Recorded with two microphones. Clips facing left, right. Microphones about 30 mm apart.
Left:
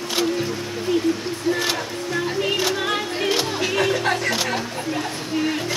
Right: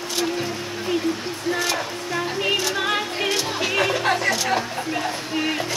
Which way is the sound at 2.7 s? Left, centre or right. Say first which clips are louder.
Even; centre.